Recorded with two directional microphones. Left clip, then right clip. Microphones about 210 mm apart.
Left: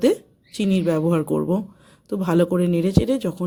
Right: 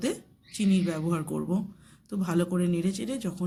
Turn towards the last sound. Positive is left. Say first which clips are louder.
# left 12 dB
turn(degrees=50)  # may be behind; listen again after turning